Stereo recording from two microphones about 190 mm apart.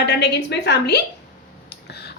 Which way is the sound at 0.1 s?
60° left (ahead or behind).